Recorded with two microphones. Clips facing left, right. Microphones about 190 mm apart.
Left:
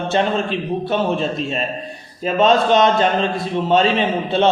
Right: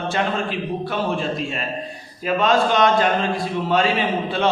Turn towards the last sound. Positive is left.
turn(degrees=25)  # may be behind; listen again after turning